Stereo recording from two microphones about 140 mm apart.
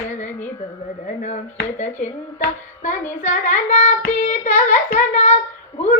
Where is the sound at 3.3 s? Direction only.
60° left (ahead or behind).